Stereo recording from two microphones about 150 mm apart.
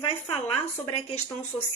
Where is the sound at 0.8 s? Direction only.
40° left (ahead or behind).